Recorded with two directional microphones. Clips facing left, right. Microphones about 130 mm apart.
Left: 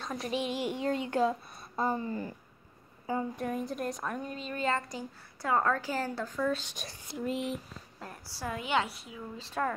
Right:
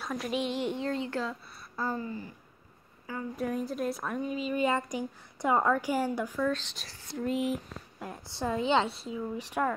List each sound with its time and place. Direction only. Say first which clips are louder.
0.0 s a woman's voice: right 1 dB; centre (ahead or behind); by 1.3 s 15° left (ahead or behind)
1.5 s a sound: left 2 dB; 20° left (ahead or behind)
3.3 s a woman's voice: right 2 dB; centre (ahead or behind)
6.4 s a woman's voice: left 2 dB; 10° left (ahead or behind)
7.2 s speech: right 3 dB; centre (ahead or behind)
8.0 s a woman's voice: right 5 dB; 20° right (ahead or behind)
9.4 s a woman's voice: right 1 dB; 15° right (ahead or behind)